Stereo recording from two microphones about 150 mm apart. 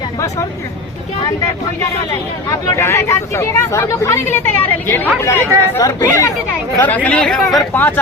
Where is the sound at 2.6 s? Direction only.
20° left (ahead or behind).